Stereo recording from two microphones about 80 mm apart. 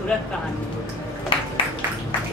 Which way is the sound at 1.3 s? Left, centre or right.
Left.